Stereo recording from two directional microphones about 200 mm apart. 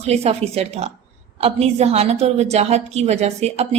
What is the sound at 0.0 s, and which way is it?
A woman's voice, 30° right (ahead or behind).